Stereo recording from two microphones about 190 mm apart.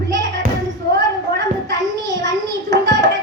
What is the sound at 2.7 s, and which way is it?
Hands, 70° right (ahead or behind).